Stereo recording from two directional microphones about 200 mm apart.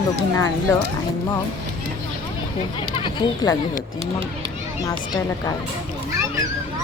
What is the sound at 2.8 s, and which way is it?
Speech, 25° left (ahead or behind).